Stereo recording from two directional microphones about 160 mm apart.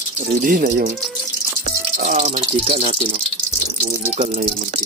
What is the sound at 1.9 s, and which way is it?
Speech, 50° right (ahead or behind).